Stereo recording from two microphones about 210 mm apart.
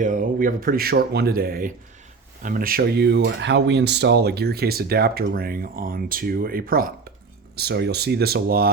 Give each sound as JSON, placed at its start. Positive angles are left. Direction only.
{"t": 0.0, "sound": "speech", "side_deg": -40}